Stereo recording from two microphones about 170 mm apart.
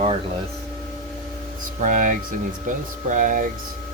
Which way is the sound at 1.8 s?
50° right (ahead or behind).